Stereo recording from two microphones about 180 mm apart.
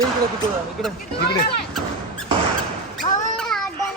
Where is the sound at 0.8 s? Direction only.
Centre (ahead or behind).